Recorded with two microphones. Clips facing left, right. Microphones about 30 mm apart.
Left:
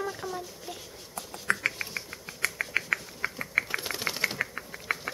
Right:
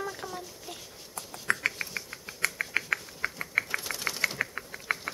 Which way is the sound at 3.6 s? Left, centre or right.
Centre.